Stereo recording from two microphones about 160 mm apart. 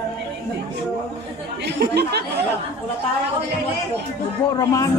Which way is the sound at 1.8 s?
90° right.